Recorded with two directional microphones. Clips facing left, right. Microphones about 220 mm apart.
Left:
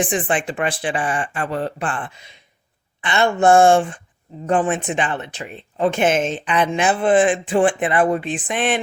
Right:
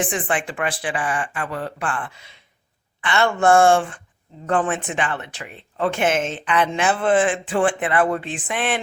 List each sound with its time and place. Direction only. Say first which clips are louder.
0.0 s speech: left 3 dB; 20° left (ahead or behind)